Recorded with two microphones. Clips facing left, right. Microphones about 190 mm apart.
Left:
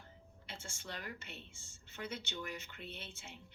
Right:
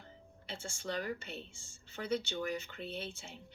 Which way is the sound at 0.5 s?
35° right (ahead or behind).